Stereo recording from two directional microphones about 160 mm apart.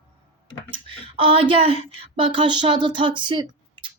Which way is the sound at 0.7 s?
35° right (ahead or behind).